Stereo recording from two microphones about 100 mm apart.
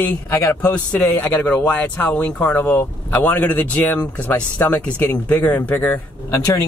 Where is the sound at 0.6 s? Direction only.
10° left (ahead or behind).